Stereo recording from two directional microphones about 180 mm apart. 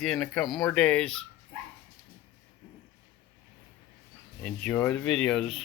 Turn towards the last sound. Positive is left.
turn(degrees=0)  # may be behind; listen again after turning